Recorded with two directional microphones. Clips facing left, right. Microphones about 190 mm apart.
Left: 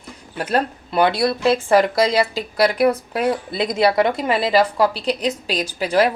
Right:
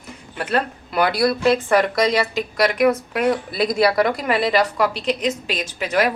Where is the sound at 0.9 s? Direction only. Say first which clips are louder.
Left 1 dB; 25° left (ahead or behind).